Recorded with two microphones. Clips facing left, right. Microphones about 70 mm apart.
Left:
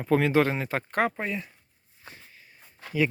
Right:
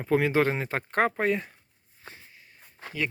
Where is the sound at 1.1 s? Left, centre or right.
Right.